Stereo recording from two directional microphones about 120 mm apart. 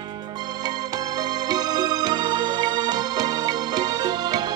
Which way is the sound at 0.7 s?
35° right (ahead or behind).